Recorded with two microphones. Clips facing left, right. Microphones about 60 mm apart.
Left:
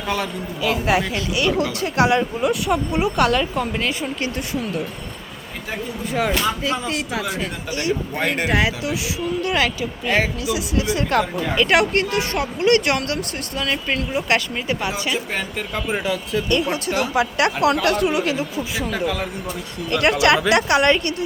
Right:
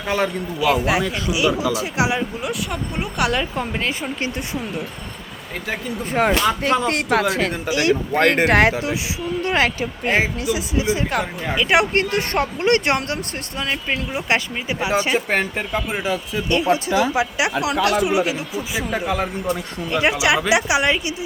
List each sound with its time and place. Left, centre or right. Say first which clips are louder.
0.6 s speech: right 1 dB; centre
3.5 s speech: left 1 dB; centre
6.1 s speech: right 3 dB; right
6.6 s speech: right 4 dB; right
7.3 s speech: right 5 dB; right
9.4 s speech: right 3 dB; right
10.5 s speech: right 1 dB; right
11.1 s speech: left 3 dB; centre
11.7 s speech: right 1 dB; right
12.1 s speech: right 1 dB; right
13.6 s speech: left 1 dB; centre
14.9 s speech: right 5 dB; right
15.7 s speech: left 2 dB; centre
17.3 s speech: left 2 dB; centre